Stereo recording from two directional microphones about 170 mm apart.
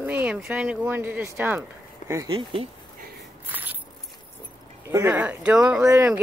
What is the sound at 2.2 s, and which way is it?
Speech, 30° right (ahead or behind).